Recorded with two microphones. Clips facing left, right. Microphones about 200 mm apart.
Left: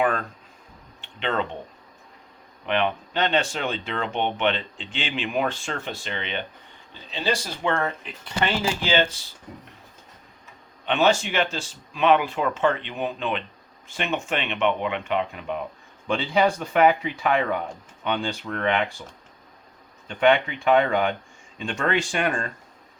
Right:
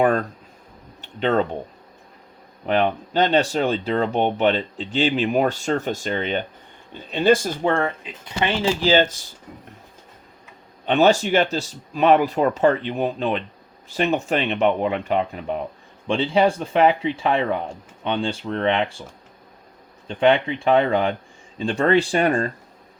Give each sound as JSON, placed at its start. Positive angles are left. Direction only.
{"t": 0.0, "sound": "speech", "side_deg": -40}
{"t": 2.6, "sound": "speech", "side_deg": -40}
{"t": 8.0, "sound": "speech", "side_deg": -15}
{"t": 8.8, "sound": "speech", "side_deg": -40}
{"t": 10.8, "sound": "speech", "side_deg": -40}
{"t": 20.1, "sound": "speech", "side_deg": -30}